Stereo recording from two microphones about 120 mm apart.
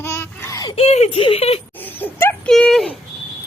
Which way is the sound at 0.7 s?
60° left (ahead or behind).